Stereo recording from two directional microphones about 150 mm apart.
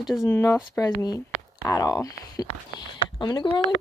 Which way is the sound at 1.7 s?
25° left (ahead or behind).